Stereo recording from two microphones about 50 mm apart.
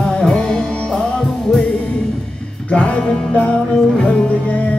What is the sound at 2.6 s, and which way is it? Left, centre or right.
Music, left.